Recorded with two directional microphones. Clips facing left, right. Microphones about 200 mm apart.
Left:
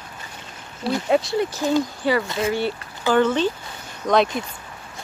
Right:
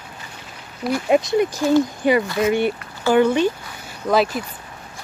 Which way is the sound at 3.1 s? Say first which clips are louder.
Right 3 dB; 15° right (ahead or behind).